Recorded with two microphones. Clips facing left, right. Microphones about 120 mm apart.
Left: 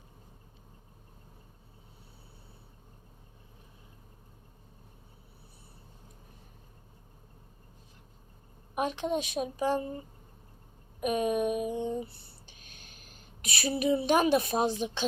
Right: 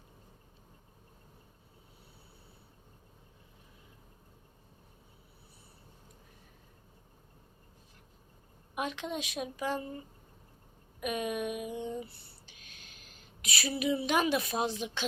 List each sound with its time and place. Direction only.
8.7 s a woman's voice: 40° left (ahead or behind)
11.0 s a woman's voice: 35° left (ahead or behind)
11.8 s a sound: 30° left (ahead or behind)
13.1 s a woman's voice: 40° left (ahead or behind)